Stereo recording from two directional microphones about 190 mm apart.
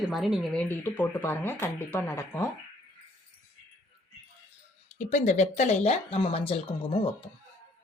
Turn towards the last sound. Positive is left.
turn(degrees=30)  # may be behind; listen again after turning